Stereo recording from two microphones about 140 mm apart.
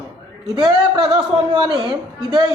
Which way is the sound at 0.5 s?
35° right (ahead or behind).